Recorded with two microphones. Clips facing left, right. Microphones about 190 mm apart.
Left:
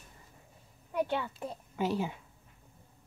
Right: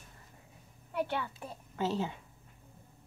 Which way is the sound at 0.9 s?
15° left (ahead or behind).